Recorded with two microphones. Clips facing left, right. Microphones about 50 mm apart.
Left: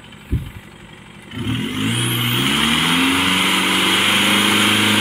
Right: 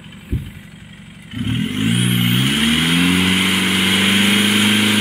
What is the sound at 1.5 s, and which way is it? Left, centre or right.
Vehicle, centre.